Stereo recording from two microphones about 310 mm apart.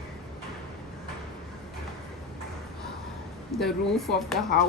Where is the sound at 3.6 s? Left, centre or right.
Centre.